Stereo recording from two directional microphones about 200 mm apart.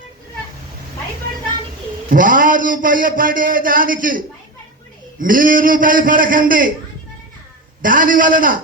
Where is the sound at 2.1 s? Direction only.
40° right (ahead or behind).